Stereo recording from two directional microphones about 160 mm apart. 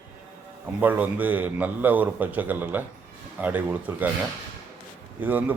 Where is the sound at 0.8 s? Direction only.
10° right (ahead or behind).